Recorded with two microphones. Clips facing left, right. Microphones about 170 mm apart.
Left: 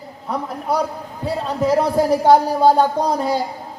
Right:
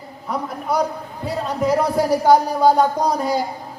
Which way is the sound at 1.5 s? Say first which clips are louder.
Left 1 dB; 30° left (ahead or behind).